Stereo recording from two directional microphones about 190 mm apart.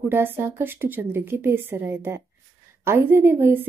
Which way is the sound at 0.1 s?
10° right (ahead or behind).